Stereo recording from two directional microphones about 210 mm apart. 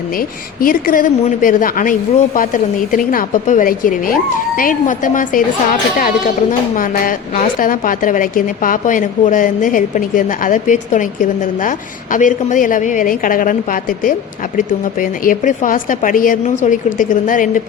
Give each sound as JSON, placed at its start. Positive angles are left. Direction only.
{"t": 0.2, "sound": "a woman's voice", "side_deg": 40}